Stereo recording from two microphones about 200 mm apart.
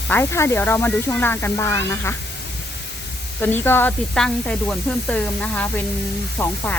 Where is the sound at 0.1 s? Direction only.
10° left (ahead or behind).